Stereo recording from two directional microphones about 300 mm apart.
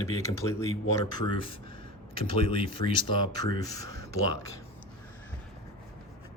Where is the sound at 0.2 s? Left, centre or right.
Centre.